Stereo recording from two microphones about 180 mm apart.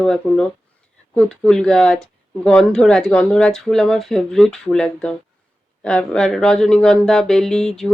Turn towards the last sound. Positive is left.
turn(degrees=0)  # may be behind; listen again after turning